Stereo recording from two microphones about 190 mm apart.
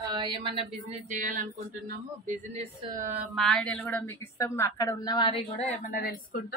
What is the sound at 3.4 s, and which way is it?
A woman's voice, 5° left (ahead or behind).